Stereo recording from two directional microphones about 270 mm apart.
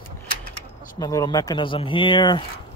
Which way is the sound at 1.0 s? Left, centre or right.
Centre.